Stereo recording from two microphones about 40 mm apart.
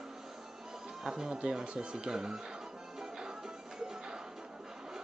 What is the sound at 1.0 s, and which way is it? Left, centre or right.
Speech, centre.